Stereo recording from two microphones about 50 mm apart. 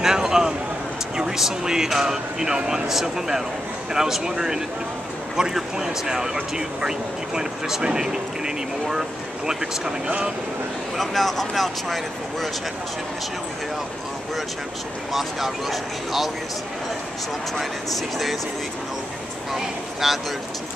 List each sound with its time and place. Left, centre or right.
0.0 s a sound: centre
1.1 s speech: centre
10.0 s speech: right
11.0 s speech: centre
15.1 s speech: centre
17.6 s speech: centre
19.5 s speech: centre